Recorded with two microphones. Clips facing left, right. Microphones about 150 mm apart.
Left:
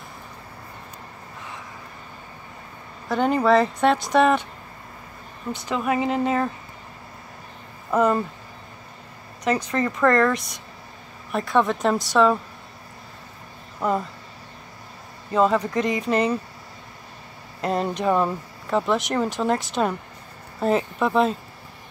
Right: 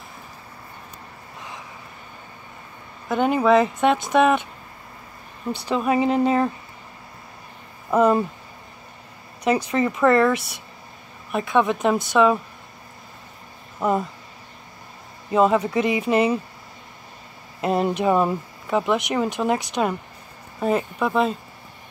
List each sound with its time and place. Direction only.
3.1 s speech: 15° right (ahead or behind)
5.5 s speech: 35° right (ahead or behind)
5.8 s speech: 20° right (ahead or behind)
7.9 s speech: 15° right (ahead or behind)
9.4 s speech: 10° right (ahead or behind)
13.7 s speech: 10° right (ahead or behind)
15.3 s speech: 15° right (ahead or behind)
17.6 s speech: 15° right (ahead or behind)